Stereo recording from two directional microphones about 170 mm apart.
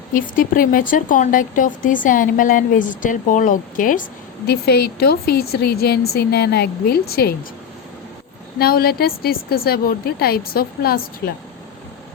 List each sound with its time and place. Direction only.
0.1 s speech: 55° left (ahead or behind)
8.5 s a woman's voice: 65° left (ahead or behind)